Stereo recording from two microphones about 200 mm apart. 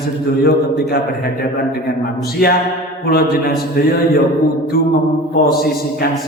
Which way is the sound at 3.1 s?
50° left (ahead or behind).